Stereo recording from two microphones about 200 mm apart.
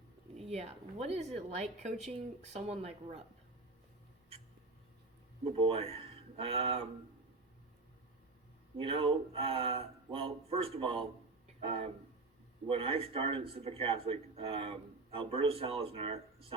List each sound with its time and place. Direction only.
0.3 s a woman's voice: 30° right (ahead or behind)
5.5 s speech: 25° right (ahead or behind)
8.8 s speech: 25° right (ahead or behind)